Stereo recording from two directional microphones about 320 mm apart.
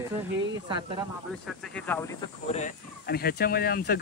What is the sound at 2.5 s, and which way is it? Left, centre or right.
Speech, left.